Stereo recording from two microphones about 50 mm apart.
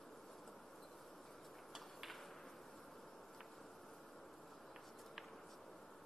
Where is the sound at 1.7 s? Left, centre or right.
Centre.